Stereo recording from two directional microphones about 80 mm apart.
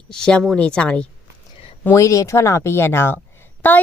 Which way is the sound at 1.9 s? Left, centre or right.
Left.